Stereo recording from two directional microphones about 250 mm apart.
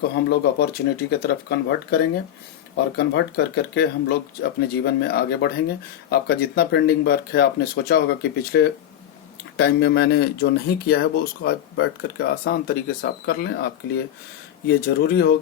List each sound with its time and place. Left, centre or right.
0.0 s speech: left
3.0 s speech: left